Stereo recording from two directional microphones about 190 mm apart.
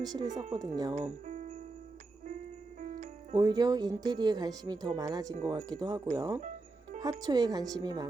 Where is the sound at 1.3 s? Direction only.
35° right (ahead or behind).